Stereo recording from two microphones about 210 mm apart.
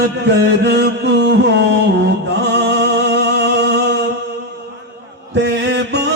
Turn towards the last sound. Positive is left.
turn(degrees=-55)  # may be behind; listen again after turning